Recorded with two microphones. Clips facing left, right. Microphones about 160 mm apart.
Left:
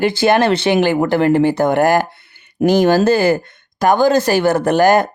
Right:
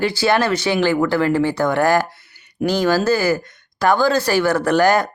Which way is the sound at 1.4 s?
50° left (ahead or behind).